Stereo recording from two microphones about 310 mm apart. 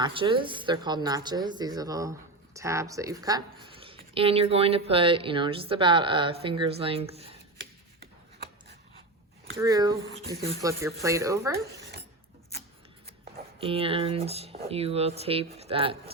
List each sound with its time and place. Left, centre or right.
0.0 s a woman's voice: centre
9.6 s a woman's voice: centre
13.6 s speech: centre